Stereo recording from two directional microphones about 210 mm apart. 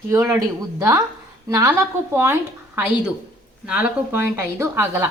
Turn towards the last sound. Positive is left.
turn(degrees=-10)  # may be behind; listen again after turning